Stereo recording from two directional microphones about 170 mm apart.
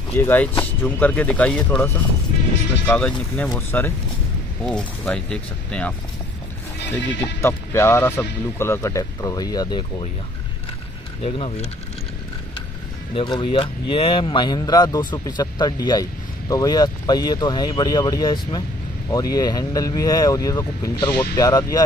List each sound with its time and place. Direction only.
0.1 s speech: 15° left (ahead or behind)
2.9 s speech: 5° left (ahead or behind); by 10.0 s 25° left (ahead or behind)
11.2 s speech: 35° left (ahead or behind)
13.1 s speech: 30° left (ahead or behind)